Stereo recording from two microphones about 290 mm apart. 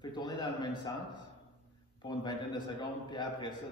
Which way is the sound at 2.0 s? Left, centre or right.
Centre.